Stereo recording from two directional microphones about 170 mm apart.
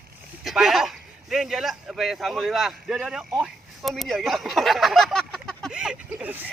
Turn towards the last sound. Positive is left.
turn(degrees=-10)  # may be behind; listen again after turning